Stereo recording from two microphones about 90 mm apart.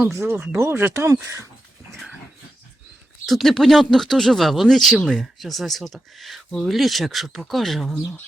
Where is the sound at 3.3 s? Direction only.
Centre (ahead or behind).